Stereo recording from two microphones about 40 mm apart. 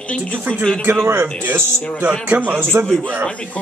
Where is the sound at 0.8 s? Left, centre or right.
Right.